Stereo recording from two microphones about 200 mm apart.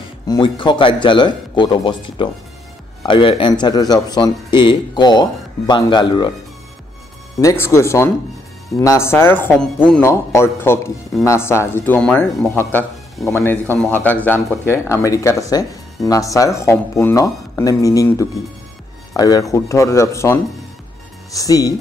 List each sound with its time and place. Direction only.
0.3 s speech: 25° left (ahead or behind)
7.3 s speech: 15° left (ahead or behind)